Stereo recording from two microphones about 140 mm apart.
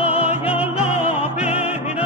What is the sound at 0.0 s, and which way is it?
Music, 45° left (ahead or behind).